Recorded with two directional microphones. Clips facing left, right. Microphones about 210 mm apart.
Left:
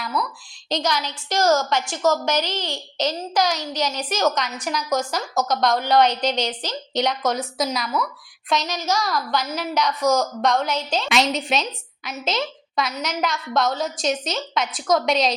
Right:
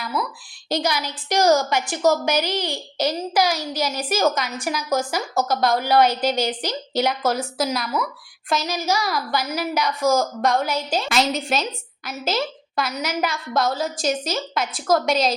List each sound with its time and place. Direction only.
0.0 s a woman's voice: 5° right (ahead or behind)